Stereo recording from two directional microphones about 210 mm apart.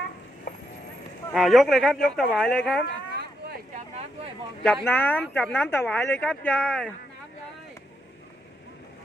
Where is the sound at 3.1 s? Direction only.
50° right (ahead or behind).